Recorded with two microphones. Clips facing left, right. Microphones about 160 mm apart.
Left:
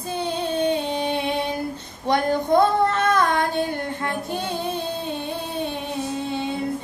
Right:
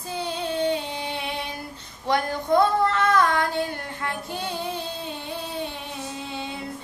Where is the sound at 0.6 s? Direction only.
20° left (ahead or behind).